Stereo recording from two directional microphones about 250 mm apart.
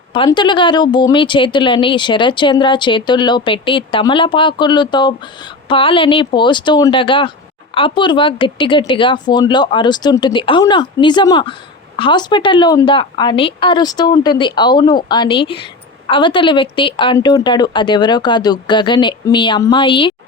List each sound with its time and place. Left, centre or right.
0.1 s speech: centre